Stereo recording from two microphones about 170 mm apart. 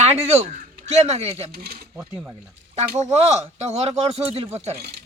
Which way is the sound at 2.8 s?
40° right (ahead or behind).